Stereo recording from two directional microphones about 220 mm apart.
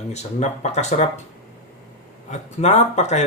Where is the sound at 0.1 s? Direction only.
30° left (ahead or behind).